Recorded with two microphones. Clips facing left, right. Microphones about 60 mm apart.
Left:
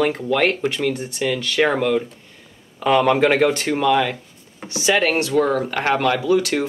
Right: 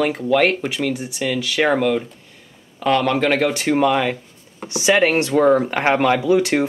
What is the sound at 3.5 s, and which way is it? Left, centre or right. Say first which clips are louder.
Speech: right 1 dB; centre.